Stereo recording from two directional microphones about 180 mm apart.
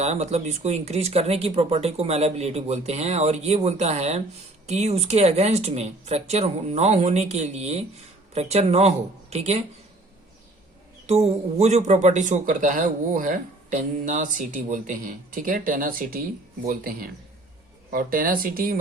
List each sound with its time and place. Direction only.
0.0 s speech: 35° right (ahead or behind)
11.0 s a man's voice: 35° right (ahead or behind); by 18.8 s 55° right (ahead or behind)